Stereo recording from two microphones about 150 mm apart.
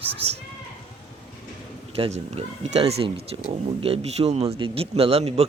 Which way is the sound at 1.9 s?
40° right (ahead or behind).